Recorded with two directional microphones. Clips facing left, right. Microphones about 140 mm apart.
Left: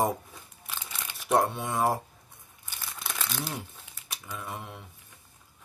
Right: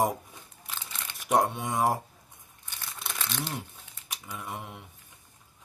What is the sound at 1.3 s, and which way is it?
Speech, 15° right (ahead or behind).